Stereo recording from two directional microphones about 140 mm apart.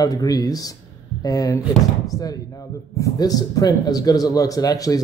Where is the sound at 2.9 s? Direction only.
25° left (ahead or behind).